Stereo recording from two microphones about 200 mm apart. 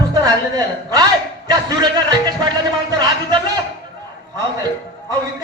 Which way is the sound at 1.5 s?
20° right (ahead or behind).